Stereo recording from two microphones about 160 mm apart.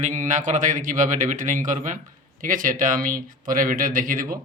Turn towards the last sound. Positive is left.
turn(degrees=-60)  # may be behind; listen again after turning